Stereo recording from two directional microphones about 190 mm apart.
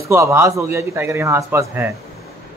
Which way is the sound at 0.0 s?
15° right (ahead or behind).